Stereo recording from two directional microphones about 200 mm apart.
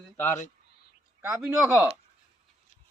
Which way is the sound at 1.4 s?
10° right (ahead or behind).